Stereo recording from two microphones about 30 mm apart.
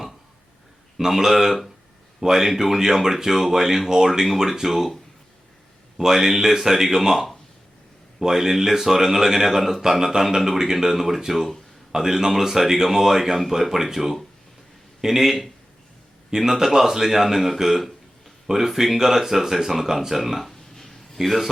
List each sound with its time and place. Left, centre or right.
0.9 s speech: centre
6.2 s speech: centre
10.2 s speech: centre
16.3 s speech: right
20.4 s a sound: centre
21.2 s speech: centre